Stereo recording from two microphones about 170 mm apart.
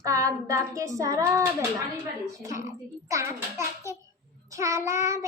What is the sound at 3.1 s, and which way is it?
A child's voice, 15° right (ahead or behind).